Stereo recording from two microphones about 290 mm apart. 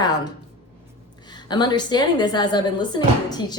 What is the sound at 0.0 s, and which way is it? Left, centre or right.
A woman's voice, centre.